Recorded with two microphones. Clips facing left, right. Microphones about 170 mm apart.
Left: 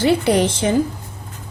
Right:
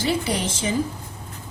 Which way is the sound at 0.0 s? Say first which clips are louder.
Left 8 dB; 65° left (ahead or behind).